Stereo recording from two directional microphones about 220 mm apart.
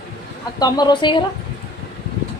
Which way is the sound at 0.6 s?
20° left (ahead or behind).